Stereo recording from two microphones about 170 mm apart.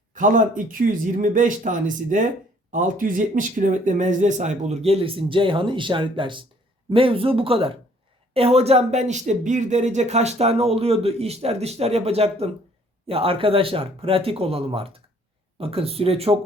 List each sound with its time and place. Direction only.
0.1 s speech: 50° right (ahead or behind)